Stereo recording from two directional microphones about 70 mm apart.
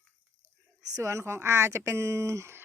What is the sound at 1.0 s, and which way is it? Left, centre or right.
Speech, right.